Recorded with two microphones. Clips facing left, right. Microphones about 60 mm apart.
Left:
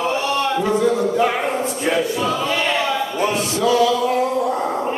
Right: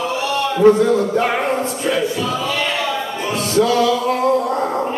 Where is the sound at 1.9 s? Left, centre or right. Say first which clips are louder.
Left 1 dB; left.